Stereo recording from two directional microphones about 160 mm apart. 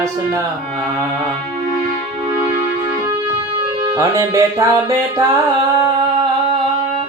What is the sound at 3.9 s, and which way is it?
Speech, 20° right (ahead or behind).